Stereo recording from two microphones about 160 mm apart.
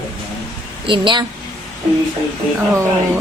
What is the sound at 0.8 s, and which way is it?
Speech, 30° right (ahead or behind).